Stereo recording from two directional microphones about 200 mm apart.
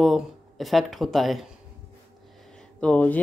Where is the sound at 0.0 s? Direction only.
Centre (ahead or behind).